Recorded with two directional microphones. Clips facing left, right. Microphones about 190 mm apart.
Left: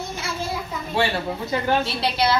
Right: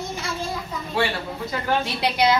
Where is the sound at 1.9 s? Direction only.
15° right (ahead or behind).